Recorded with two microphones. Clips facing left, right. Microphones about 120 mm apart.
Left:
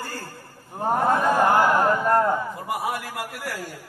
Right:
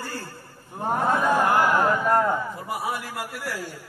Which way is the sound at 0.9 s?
40° left (ahead or behind).